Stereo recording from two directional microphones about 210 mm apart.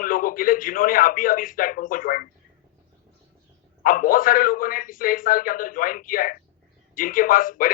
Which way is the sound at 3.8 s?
40° left (ahead or behind).